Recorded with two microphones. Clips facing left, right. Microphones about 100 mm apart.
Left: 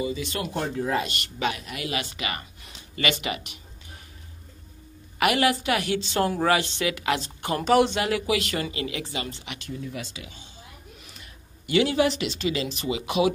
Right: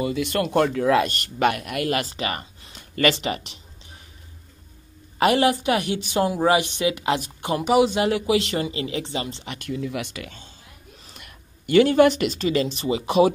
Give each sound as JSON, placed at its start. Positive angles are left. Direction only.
{"t": 0.0, "sound": "speech", "side_deg": -60}
{"t": 1.0, "sound": "speech", "side_deg": -45}
{"t": 2.0, "sound": "speech", "side_deg": -35}
{"t": 2.8, "sound": "a sound", "side_deg": -45}
{"t": 3.2, "sound": "speech", "side_deg": -30}
{"t": 5.2, "sound": "a woman's voice", "side_deg": -30}
{"t": 7.2, "sound": "speech", "side_deg": -10}
{"t": 7.9, "sound": "a woman's voice", "side_deg": -25}
{"t": 9.7, "sound": "speech", "side_deg": -75}
{"t": 11.1, "sound": "a sound", "side_deg": -55}
{"t": 12.2, "sound": "speech", "side_deg": -40}